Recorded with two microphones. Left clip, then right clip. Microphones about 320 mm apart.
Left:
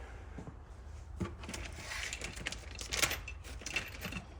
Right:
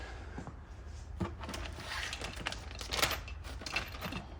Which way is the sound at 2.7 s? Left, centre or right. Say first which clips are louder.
Right 1 dB; centre.